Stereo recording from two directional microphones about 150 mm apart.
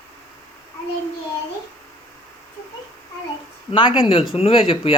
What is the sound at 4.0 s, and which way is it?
Speech, 35° left (ahead or behind).